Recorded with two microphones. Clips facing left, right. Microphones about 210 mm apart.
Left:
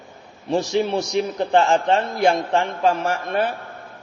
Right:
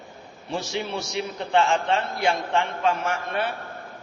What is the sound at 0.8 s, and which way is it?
A man's voice, 40° left (ahead or behind).